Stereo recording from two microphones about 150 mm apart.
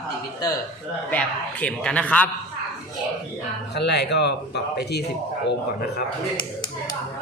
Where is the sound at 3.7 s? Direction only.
90° left.